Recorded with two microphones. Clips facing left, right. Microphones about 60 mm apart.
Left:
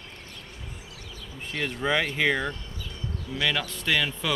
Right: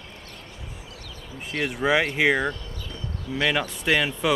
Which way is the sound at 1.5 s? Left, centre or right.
Centre.